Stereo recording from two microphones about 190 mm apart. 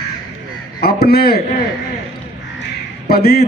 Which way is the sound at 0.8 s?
55° left (ahead or behind).